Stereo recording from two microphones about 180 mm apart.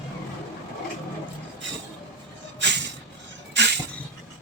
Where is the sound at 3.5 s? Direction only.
75° right (ahead or behind).